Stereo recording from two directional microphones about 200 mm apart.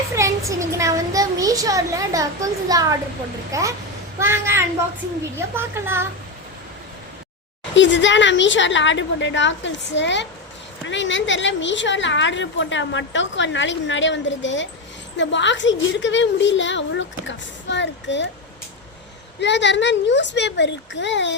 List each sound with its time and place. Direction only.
0.2 s a child's voice: 15° right (ahead or behind)
7.8 s a woman's voice: 65° left (ahead or behind)
19.4 s a woman's voice: 60° left (ahead or behind)